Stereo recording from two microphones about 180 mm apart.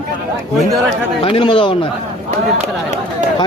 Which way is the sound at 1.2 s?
30° left (ahead or behind).